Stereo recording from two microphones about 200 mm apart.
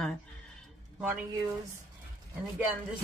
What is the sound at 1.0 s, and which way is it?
Speech, 10° right (ahead or behind).